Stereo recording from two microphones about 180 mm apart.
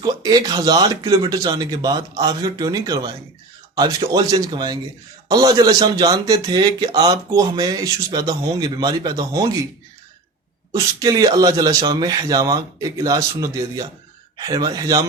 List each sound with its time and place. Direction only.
0.0 s a man's voice: 20° right (ahead or behind)
10.7 s a man's voice: 20° right (ahead or behind)